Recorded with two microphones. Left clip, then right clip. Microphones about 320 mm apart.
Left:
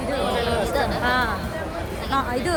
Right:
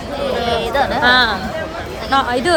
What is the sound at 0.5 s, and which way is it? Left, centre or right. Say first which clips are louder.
Music: right 6 dB; right.